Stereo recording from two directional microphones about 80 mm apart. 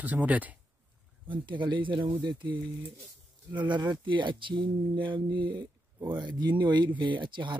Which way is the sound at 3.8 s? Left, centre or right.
Right.